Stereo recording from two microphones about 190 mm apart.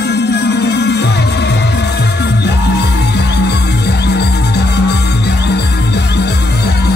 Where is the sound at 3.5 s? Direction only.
60° left (ahead or behind).